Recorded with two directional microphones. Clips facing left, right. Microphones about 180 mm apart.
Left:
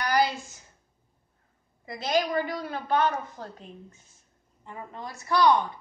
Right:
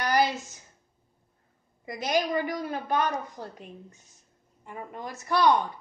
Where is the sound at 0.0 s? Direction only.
20° right (ahead or behind).